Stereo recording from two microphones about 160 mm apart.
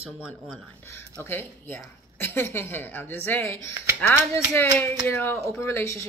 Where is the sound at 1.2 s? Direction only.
15° left (ahead or behind).